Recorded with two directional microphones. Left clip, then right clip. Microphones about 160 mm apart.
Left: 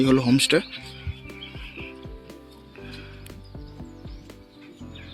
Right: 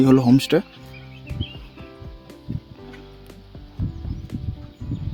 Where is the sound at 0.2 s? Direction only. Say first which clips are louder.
Right 2 dB; 40° right (ahead or behind).